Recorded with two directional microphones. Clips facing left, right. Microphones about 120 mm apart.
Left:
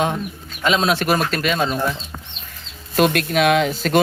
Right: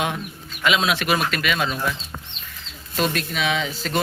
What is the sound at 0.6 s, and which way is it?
Speech, 35° left (ahead or behind).